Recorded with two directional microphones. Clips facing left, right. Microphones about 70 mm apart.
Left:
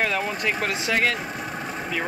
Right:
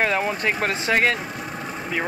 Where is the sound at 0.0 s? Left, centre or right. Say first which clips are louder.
Right 3 dB; right.